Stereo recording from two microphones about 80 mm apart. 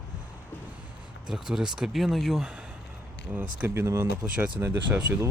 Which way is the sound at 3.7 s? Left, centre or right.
Right.